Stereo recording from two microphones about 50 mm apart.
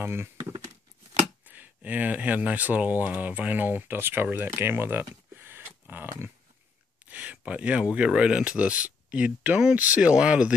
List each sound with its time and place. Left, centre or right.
0.0 s speech: right
1.4 s speech: right
4.6 s a sound: right
7.1 s speech: right